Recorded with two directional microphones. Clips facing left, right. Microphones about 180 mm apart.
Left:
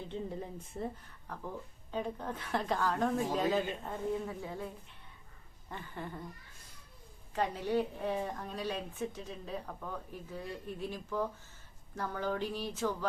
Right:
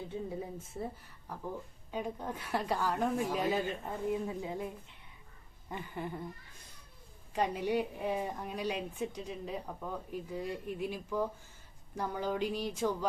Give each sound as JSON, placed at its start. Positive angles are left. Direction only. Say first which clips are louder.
{"t": 0.1, "sound": "a woman's voice", "louder": "left 1 dB", "side_deg": -10}
{"t": 7.3, "sound": "a woman's voice", "louder": "right 1 dB", "side_deg": -15}